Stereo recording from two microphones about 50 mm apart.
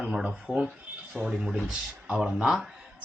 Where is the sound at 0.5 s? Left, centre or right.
Left.